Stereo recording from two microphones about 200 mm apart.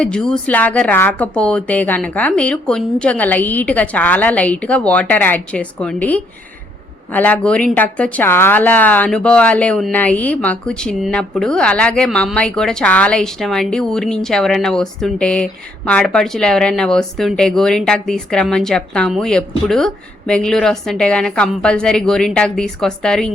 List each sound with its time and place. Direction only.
0.0 s a woman's voice: 5° left (ahead or behind)